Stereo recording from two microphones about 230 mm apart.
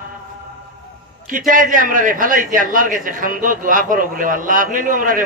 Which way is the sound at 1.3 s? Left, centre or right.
Right.